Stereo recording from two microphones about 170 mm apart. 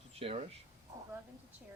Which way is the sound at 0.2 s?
35° right (ahead or behind).